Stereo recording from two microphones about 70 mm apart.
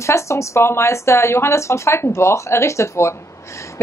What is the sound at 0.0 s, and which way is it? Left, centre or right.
A woman's voice, left.